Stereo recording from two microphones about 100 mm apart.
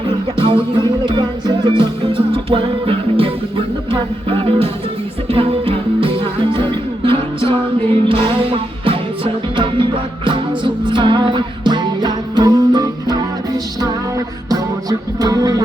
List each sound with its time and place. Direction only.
0.3 s music: 55° right (ahead or behind); by 15.6 s 40° right (ahead or behind)